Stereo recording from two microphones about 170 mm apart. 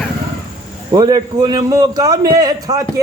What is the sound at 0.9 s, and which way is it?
Speech, 25° right (ahead or behind).